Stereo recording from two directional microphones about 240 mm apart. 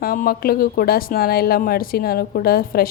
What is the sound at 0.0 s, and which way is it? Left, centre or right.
A woman's voice, left.